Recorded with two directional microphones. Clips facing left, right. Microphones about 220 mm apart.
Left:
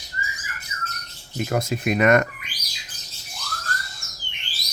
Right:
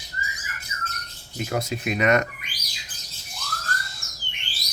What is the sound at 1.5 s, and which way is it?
Speech, 50° left (ahead or behind).